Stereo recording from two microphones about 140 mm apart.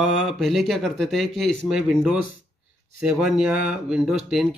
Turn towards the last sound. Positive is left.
turn(degrees=0)  # may be behind; listen again after turning